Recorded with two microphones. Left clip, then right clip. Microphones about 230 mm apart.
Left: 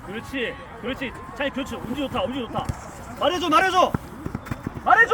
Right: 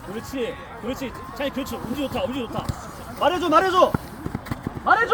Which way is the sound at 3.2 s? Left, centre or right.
Left.